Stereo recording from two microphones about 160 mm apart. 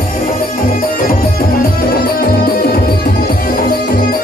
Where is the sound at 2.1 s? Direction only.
70° left (ahead or behind).